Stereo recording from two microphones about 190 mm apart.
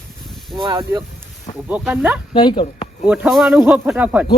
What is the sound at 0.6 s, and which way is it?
Speech, 20° right (ahead or behind).